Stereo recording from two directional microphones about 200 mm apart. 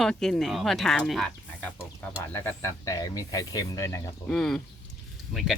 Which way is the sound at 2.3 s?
15° left (ahead or behind).